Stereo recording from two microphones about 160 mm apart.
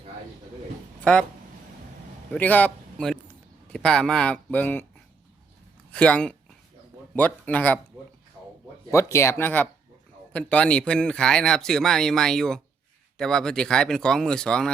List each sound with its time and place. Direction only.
1.1 s speech: 10° left (ahead or behind)
2.3 s speech: 10° left (ahead or behind)
5.9 s speech: 5° left (ahead or behind)
8.9 s speech: 20° left (ahead or behind)